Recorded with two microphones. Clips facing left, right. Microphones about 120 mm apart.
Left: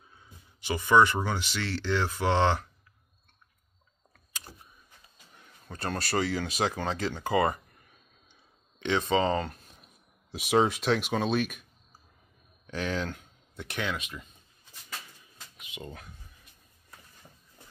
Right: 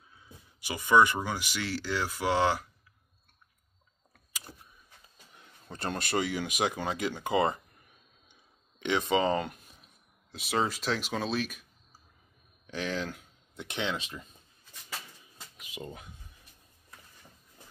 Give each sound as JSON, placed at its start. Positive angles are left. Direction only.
{"t": 0.6, "sound": "speech", "side_deg": -10}
{"t": 5.4, "sound": "speech", "side_deg": -20}
{"t": 8.7, "sound": "a sound", "side_deg": -15}
{"t": 9.1, "sound": "speech", "side_deg": -15}
{"t": 10.4, "sound": "speech", "side_deg": 0}
{"t": 12.8, "sound": "speech", "side_deg": 0}
{"t": 13.6, "sound": "speech", "side_deg": -20}
{"t": 15.6, "sound": "a sound", "side_deg": -35}